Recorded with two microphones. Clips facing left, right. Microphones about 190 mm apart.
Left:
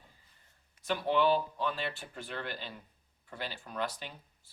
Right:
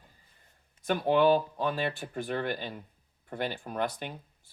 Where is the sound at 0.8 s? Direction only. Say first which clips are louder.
Right 5 dB; 50° right (ahead or behind).